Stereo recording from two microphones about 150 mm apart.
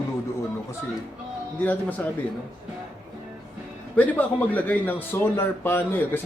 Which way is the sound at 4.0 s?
10° left (ahead or behind).